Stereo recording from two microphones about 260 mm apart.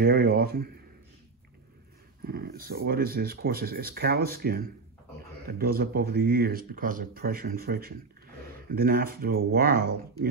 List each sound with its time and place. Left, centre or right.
0.0 s speech: right
2.2 s speech: right